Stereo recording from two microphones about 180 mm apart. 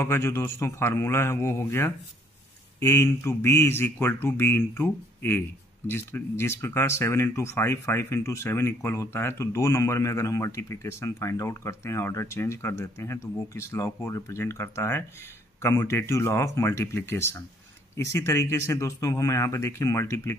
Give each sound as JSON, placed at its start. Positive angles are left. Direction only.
{"t": 0.0, "sound": "speech", "side_deg": 15}